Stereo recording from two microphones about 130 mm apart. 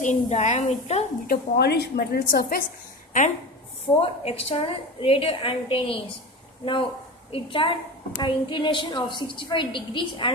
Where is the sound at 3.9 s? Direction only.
15° left (ahead or behind).